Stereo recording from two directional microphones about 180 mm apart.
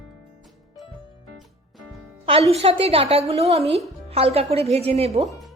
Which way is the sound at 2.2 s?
35° right (ahead or behind).